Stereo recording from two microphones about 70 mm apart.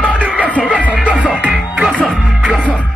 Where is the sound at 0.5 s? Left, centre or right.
Centre.